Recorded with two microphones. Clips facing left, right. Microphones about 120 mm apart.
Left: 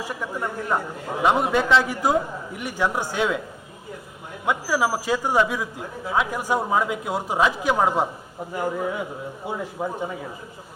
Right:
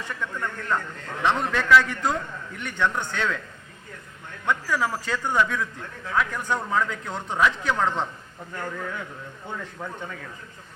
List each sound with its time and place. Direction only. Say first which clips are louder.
0.0 s a man's voice: left 3 dB; 10° left (ahead or behind)
4.4 s a man's voice: left 3 dB; 10° left (ahead or behind)
9.7 s speech: left 7 dB; 30° left (ahead or behind)
10.0 s speech: left 7 dB; 20° left (ahead or behind)